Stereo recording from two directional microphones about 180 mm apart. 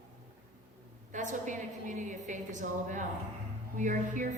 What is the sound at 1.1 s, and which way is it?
A woman's voice, 45° right (ahead or behind).